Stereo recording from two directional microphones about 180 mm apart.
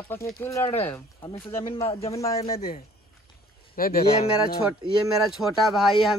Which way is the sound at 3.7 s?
55° left (ahead or behind).